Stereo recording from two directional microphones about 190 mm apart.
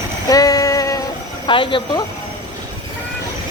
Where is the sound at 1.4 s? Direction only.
25° left (ahead or behind).